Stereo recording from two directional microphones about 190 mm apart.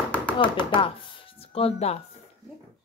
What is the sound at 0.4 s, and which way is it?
Speech, 25° left (ahead or behind).